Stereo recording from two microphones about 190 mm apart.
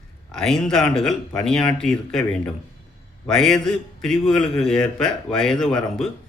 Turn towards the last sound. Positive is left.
turn(degrees=0)  # may be behind; listen again after turning